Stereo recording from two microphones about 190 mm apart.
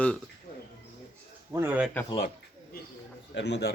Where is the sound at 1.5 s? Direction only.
10° right (ahead or behind).